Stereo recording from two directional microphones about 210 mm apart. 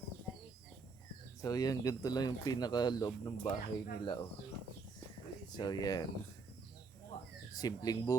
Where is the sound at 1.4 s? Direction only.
15° left (ahead or behind).